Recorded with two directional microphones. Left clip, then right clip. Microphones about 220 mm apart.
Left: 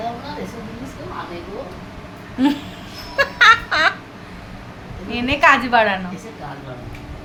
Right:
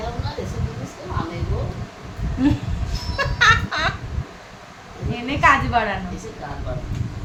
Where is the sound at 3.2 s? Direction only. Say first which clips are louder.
Left 4 dB; 30° left (ahead or behind).